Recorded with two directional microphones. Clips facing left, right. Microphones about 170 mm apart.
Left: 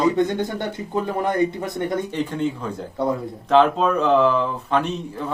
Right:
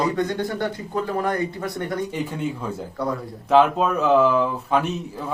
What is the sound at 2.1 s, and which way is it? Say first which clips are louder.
Speech: left 3 dB; 10° right (ahead or behind).